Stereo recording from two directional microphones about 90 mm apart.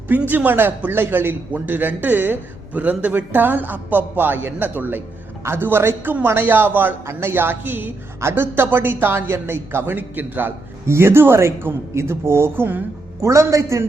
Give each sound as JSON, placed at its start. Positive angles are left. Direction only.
{"t": 0.3, "sound": "a man's voice", "side_deg": -20}
{"t": 13.2, "sound": "a man's voice", "side_deg": -35}